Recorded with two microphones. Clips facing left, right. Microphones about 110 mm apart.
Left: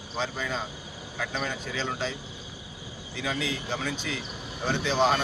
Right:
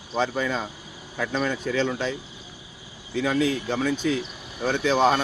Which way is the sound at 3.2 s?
50° right (ahead or behind).